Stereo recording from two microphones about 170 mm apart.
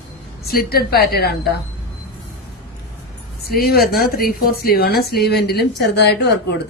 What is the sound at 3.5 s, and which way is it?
A woman's voice, 65° left (ahead or behind).